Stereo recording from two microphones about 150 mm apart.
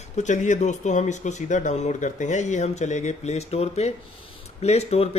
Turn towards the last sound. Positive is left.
turn(degrees=45)  # may be behind; listen again after turning